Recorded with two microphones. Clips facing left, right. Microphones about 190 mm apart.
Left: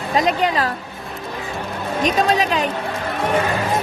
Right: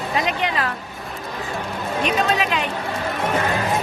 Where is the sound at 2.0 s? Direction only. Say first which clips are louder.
Left 4 dB; 40° left (ahead or behind).